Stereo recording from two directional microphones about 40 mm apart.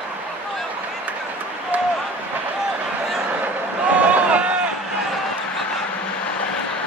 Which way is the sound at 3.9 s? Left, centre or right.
Right.